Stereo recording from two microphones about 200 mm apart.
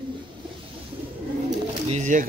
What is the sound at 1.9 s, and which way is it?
Speech, 35° right (ahead or behind).